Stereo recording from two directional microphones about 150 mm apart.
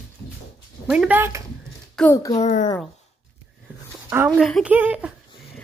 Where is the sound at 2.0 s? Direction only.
5° left (ahead or behind).